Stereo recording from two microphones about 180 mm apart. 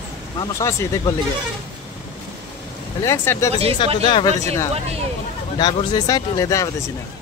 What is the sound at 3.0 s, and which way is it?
Speech, 15° left (ahead or behind).